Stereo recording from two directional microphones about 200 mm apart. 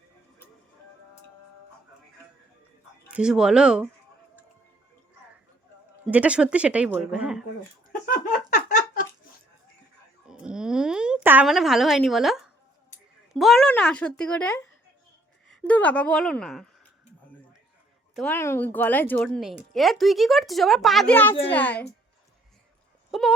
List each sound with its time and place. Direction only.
3.1 s speech: 5° right (ahead or behind)
6.1 s speech: 5° right (ahead or behind)
8.0 s a sound: 40° left (ahead or behind)
10.2 s a sound: 5° right (ahead or behind)
13.3 s speech: centre (ahead or behind)
18.2 s a child's voice: 10° left (ahead or behind)
23.1 s speech: centre (ahead or behind)